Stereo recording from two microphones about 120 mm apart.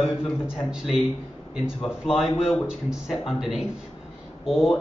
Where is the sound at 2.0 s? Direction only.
5° right (ahead or behind).